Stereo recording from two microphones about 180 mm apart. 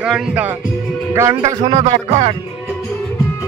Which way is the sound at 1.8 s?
35° right (ahead or behind).